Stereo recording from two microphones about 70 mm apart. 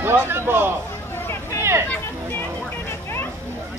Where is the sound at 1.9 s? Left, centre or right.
Left.